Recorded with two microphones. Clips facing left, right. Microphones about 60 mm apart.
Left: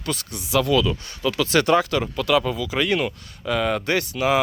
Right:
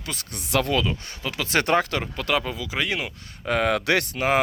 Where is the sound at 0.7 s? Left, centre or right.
Right.